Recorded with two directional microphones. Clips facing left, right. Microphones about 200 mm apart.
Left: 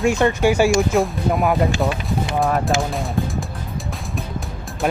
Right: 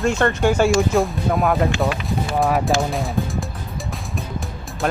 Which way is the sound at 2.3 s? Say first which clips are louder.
Right 1 dB; centre (ahead or behind).